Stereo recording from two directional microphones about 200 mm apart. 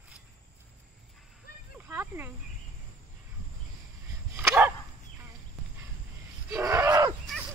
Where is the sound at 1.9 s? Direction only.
10° right (ahead or behind).